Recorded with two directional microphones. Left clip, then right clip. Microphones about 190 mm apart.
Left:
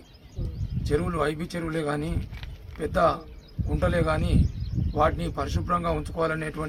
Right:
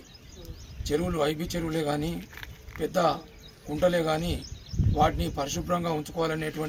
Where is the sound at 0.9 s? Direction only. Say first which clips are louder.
Left 1 dB; 5° left (ahead or behind).